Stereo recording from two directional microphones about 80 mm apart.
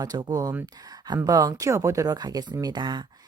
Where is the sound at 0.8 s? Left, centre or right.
Right.